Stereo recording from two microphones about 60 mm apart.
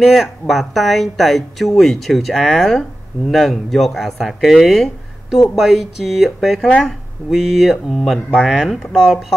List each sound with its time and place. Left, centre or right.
0.0 s speech: centre